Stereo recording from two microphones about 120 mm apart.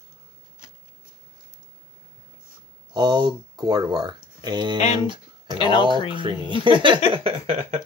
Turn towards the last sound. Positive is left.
turn(degrees=-55)  # may be behind; listen again after turning